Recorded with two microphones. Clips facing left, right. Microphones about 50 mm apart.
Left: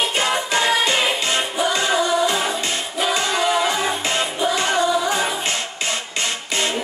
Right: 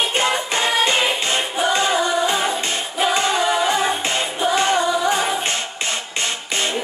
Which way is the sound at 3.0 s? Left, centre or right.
Right.